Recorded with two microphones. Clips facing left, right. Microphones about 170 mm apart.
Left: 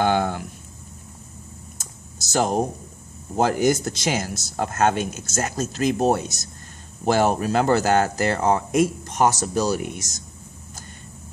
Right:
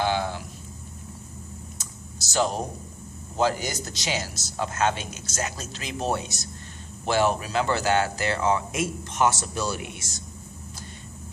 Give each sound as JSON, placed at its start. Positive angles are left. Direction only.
{"t": 0.0, "sound": "speech", "side_deg": 50}
{"t": 1.8, "sound": "computer keyboard", "side_deg": 50}
{"t": 3.3, "sound": "speech", "side_deg": 50}